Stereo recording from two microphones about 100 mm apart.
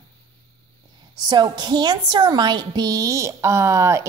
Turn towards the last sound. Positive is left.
turn(degrees=-30)  # may be behind; listen again after turning